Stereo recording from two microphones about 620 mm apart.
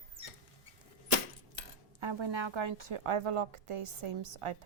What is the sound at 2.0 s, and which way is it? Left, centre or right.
A woman's voice, right.